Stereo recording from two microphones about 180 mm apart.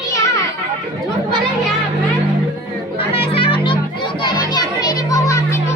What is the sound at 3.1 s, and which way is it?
Children playing, 30° left (ahead or behind).